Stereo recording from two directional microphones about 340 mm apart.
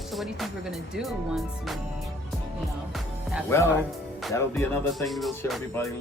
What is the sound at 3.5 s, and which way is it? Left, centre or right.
Speech, centre.